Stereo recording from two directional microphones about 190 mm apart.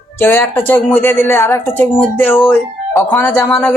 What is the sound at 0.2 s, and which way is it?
Speech, 10° left (ahead or behind).